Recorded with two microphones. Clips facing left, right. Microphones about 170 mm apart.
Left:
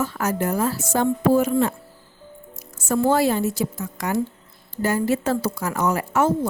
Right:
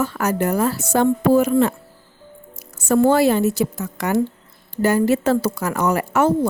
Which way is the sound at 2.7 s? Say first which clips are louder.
Right 4 dB; 65° right (ahead or behind).